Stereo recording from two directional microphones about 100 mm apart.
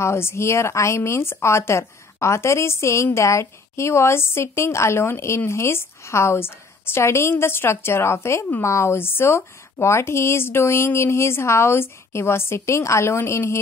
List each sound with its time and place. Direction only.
0.0 s a woman's voice: 25° left (ahead or behind)